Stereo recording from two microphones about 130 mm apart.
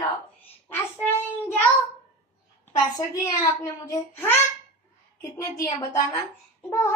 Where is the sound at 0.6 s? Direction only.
15° left (ahead or behind).